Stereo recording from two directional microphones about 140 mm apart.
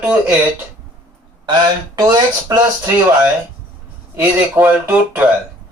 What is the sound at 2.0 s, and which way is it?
Speech, 25° right (ahead or behind).